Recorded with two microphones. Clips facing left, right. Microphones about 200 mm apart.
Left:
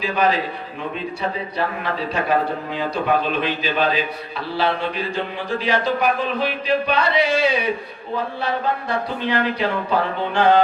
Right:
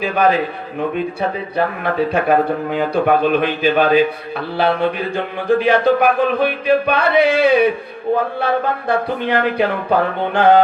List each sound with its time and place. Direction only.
0.0 s speech: 55° right (ahead or behind)